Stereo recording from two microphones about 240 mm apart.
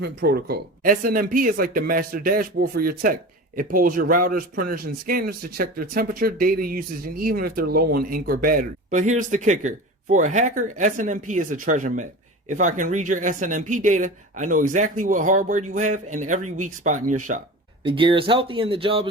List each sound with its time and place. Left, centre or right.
0.0 s speech: right
17.8 s speech: right